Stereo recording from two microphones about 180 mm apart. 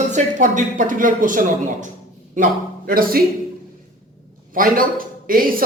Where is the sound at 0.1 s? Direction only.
45° right (ahead or behind).